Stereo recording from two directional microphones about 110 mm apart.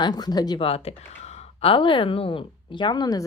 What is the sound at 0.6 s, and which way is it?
Speech, 65° left (ahead or behind).